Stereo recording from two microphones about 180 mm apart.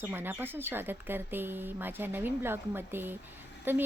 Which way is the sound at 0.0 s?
10° right (ahead or behind).